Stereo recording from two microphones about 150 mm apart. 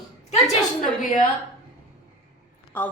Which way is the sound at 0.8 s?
55° left (ahead or behind).